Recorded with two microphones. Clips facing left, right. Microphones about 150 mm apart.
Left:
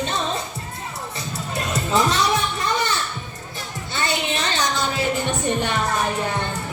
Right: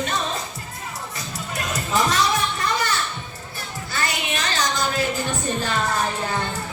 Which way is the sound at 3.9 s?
25° left (ahead or behind).